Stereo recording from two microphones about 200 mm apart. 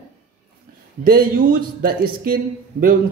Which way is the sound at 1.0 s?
45° right (ahead or behind).